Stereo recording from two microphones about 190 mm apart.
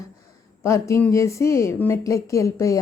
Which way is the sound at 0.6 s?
15° left (ahead or behind).